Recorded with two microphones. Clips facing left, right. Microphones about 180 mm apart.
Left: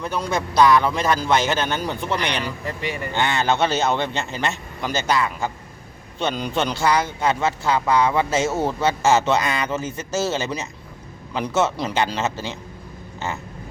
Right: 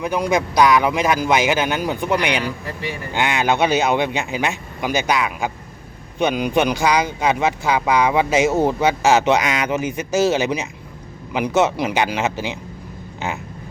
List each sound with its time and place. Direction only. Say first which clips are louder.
0.0 s speech: right 5 dB; 15° right (ahead or behind)